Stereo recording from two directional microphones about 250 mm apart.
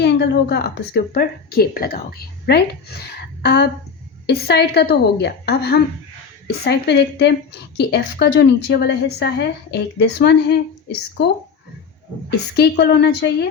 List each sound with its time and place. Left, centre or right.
0.0 s a woman's voice: left
12.3 s a woman's voice: left